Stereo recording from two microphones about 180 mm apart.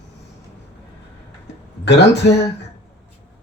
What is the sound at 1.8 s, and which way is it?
Speech, 70° left (ahead or behind).